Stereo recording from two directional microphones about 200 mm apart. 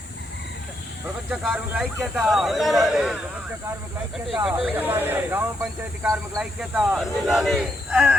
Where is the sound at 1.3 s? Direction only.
5° right (ahead or behind).